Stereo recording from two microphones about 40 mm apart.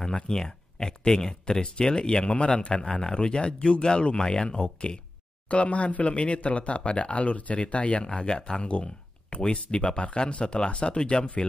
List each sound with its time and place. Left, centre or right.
0.0 s speech: centre
5.5 s speech: left